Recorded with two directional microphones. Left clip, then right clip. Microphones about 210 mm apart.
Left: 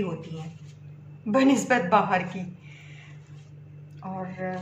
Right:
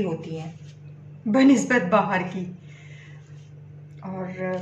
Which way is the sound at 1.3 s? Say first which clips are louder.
Right 3 dB; 20° left (ahead or behind).